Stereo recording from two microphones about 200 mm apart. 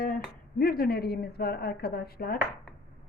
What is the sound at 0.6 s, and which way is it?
Speech, 50° left (ahead or behind).